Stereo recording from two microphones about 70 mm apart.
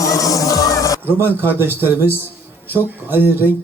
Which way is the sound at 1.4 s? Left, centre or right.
Right.